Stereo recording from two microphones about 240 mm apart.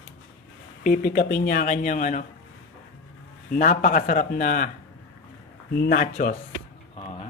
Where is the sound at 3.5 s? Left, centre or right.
Left.